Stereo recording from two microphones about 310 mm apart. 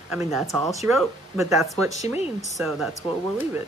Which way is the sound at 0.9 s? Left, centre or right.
Centre.